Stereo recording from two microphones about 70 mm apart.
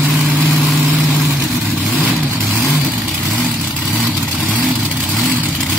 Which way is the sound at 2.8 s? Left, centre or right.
Centre.